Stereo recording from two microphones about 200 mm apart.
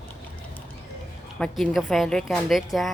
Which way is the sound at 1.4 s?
5° left (ahead or behind).